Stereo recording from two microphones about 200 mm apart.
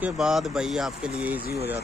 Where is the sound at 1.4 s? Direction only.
50° left (ahead or behind).